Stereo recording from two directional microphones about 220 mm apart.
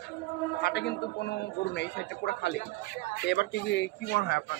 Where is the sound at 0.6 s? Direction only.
50° left (ahead or behind).